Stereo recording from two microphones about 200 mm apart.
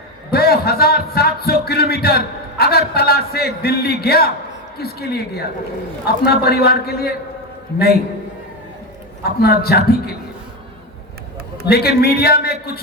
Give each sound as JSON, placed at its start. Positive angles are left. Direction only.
{"t": 0.3, "sound": "a man's voice", "side_deg": 50}
{"t": 9.4, "sound": "a man's voice", "side_deg": 50}
{"t": 11.7, "sound": "a man's voice", "side_deg": 50}